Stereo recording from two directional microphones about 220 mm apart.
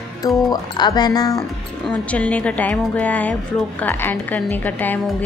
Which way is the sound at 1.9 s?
5° left (ahead or behind).